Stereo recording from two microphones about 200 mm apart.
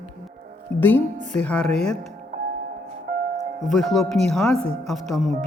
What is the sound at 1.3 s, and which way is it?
Speech, 5° left (ahead or behind).